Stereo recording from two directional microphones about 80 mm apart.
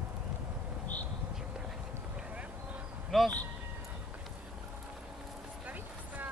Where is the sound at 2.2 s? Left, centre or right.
Centre.